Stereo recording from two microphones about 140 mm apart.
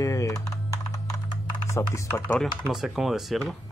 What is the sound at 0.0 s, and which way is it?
Typing, 25° left (ahead or behind).